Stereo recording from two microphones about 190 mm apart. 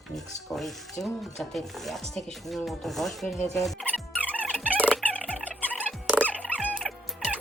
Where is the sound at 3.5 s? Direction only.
5° left (ahead or behind).